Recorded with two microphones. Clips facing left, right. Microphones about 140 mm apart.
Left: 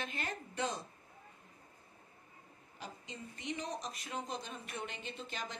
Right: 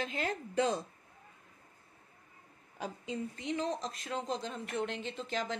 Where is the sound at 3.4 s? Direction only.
90° right.